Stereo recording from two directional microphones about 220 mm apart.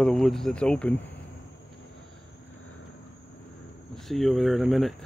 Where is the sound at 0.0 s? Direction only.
Centre (ahead or behind).